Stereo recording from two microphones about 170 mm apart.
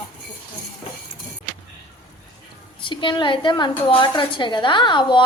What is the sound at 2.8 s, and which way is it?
A woman's voice, 30° left (ahead or behind).